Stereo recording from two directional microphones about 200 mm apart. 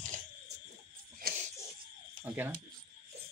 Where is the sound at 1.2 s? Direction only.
50° right (ahead or behind).